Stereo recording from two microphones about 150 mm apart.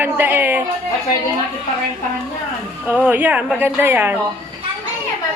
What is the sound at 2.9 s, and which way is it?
A man's voice, 10° right (ahead or behind).